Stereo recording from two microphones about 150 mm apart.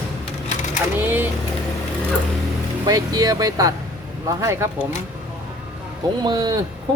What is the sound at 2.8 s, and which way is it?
Speech, 25° right (ahead or behind).